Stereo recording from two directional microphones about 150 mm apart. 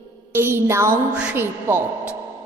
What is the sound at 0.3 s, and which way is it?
A woman's voice, 15° right (ahead or behind).